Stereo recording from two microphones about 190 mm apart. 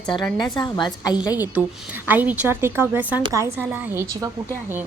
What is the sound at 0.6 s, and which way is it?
Speech, 20° left (ahead or behind).